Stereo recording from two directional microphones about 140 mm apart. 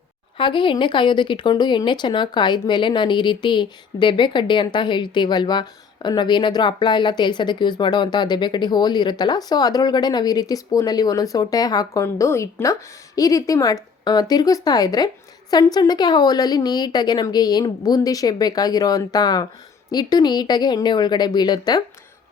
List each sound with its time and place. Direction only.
0.3 s a woman's voice: 35° left (ahead or behind)